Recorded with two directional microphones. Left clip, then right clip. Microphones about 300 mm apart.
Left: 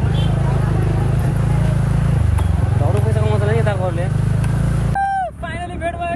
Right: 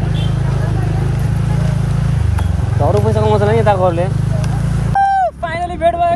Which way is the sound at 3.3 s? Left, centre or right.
Right.